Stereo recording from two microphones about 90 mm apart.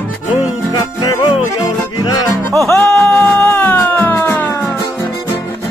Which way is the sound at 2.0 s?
45° left (ahead or behind).